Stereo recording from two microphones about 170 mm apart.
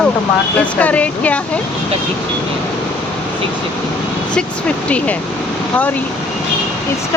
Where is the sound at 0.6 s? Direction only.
10° left (ahead or behind).